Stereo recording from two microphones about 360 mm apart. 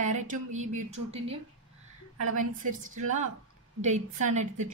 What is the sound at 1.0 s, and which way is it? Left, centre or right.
Speech, right.